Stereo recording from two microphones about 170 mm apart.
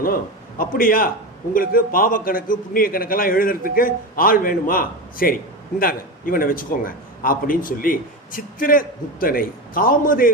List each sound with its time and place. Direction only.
0.6 s a man's voice: 55° left (ahead or behind)